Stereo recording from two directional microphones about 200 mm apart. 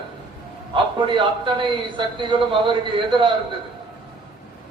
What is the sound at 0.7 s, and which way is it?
A man's voice, 25° right (ahead or behind).